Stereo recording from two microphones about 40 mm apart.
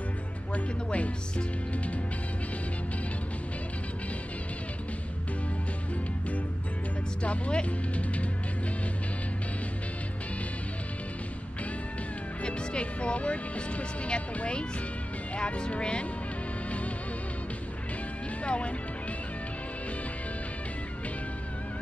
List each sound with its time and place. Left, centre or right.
0.8 s speech: left
7.2 s speech: left
12.4 s speech: left
18.4 s music: left